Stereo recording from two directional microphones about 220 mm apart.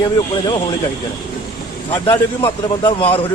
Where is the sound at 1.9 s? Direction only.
25° left (ahead or behind).